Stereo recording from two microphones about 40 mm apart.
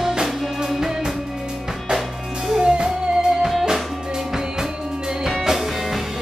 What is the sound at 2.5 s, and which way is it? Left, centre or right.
Music, right.